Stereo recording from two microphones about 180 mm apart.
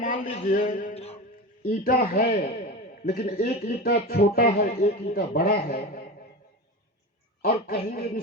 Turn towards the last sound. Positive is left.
turn(degrees=55)  # may be behind; listen again after turning